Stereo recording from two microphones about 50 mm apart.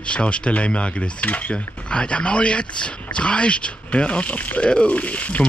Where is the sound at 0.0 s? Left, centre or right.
Left.